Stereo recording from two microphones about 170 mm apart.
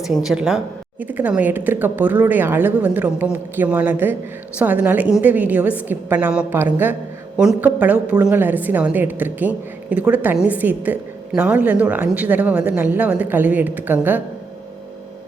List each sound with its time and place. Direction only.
0.0 s a woman's voice: centre (ahead or behind)